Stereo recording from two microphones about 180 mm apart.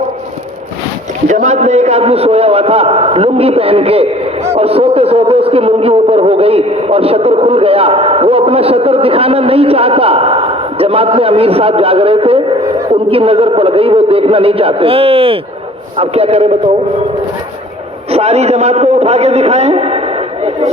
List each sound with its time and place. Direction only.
1.3 s a man's voice: 40° right (ahead or behind)
18.1 s a man's voice: 35° right (ahead or behind)